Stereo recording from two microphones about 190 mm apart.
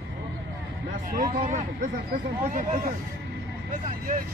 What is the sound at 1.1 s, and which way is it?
Speech, 45° right (ahead or behind).